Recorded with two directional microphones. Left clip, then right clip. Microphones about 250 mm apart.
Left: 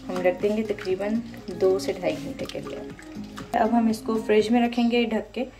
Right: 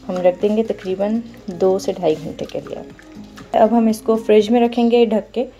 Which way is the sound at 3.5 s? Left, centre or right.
Right.